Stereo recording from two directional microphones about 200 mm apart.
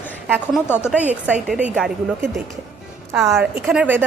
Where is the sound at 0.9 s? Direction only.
5° right (ahead or behind).